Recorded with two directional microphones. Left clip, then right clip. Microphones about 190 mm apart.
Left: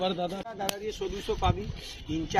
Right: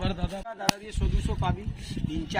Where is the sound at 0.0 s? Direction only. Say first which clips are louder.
Left 4 dB; 65° right (ahead or behind).